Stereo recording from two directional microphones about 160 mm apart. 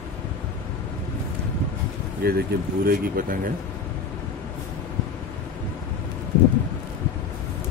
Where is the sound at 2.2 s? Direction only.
70° right (ahead or behind).